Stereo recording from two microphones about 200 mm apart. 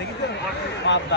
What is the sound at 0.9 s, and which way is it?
Speech, 65° left (ahead or behind).